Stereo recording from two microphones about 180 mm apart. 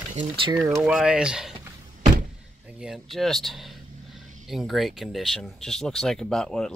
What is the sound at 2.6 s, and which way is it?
Vehicle, 5° right (ahead or behind).